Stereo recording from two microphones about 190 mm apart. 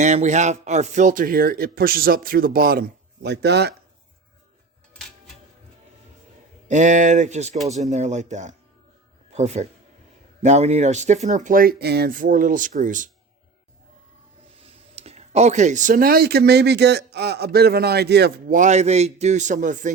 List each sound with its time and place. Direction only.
0.0 s speech: 35° right (ahead or behind); by 3.8 s 60° right (ahead or behind)
6.7 s a man's voice: 40° right (ahead or behind)
14.6 s speech: 35° right (ahead or behind); by 18.5 s 60° right (ahead or behind)
18.5 s a man's voice: 40° right (ahead or behind)